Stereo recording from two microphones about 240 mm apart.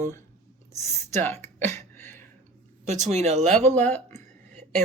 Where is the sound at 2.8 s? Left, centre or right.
Right.